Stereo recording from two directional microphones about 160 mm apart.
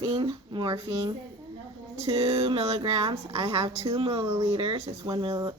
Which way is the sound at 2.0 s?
40° right (ahead or behind).